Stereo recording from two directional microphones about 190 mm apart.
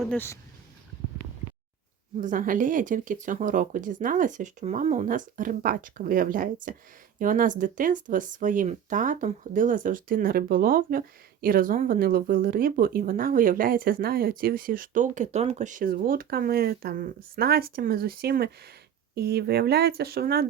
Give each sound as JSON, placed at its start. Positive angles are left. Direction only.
{"t": 0.0, "sound": "speech", "side_deg": 5}
{"t": 2.2, "sound": "speech", "side_deg": -45}